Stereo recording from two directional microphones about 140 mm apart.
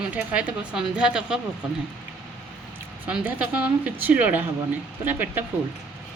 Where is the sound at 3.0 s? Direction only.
10° right (ahead or behind).